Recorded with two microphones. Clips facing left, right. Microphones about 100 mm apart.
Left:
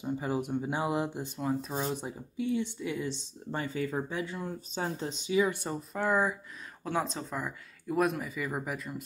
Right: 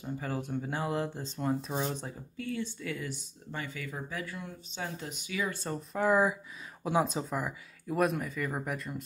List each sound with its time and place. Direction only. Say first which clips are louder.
0.0 s speech: left 4 dB; 15° left (ahead or behind)
1.4 s speech: even; centre (ahead or behind)
2.0 s speech: left 5 dB; 15° left (ahead or behind)
4.4 s speech: left 5 dB; 35° left (ahead or behind); by 5.8 s 15° left (ahead or behind)
5.9 s speech: right 2 dB; 5° right (ahead or behind)